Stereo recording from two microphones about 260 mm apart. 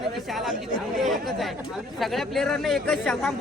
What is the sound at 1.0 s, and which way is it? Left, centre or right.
Speech, centre.